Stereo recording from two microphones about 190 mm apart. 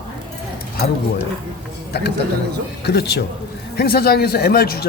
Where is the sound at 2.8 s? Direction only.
60° left (ahead or behind).